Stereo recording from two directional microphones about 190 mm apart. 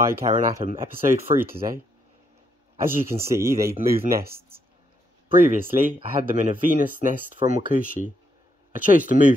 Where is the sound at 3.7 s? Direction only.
50° right (ahead or behind).